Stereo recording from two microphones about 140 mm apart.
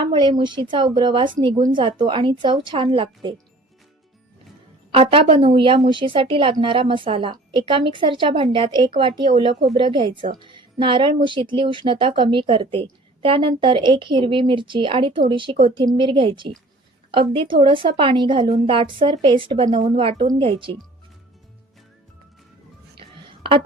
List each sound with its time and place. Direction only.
0.1 s speech: 35° right (ahead or behind)
4.9 s speech: 40° right (ahead or behind)
23.0 s a sound: 40° right (ahead or behind)